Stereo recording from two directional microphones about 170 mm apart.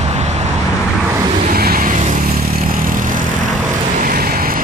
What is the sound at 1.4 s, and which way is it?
Vehicle, 60° right (ahead or behind).